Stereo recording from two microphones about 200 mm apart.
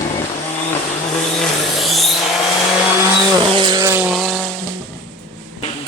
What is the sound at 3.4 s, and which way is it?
Vehicle, 20° right (ahead or behind).